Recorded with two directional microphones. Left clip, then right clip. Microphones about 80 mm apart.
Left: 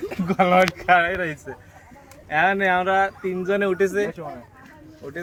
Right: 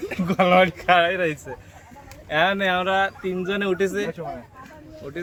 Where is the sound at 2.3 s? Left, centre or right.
Right.